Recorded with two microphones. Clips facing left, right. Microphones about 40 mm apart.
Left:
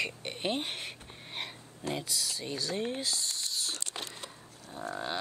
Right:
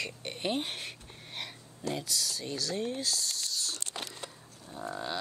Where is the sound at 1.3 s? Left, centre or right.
Centre; by 4.2 s left.